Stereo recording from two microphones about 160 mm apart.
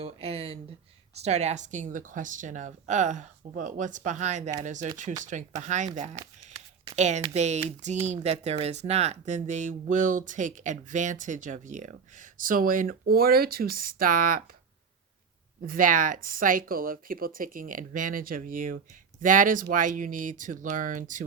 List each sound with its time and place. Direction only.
0.0 s speech: 40° right (ahead or behind); by 14.4 s 60° right (ahead or behind)
15.6 s speech: 60° right (ahead or behind)